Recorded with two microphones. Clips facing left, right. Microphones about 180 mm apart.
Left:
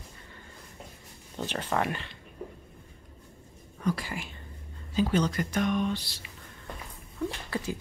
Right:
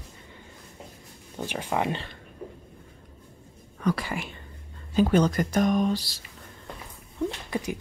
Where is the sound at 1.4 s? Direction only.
10° right (ahead or behind).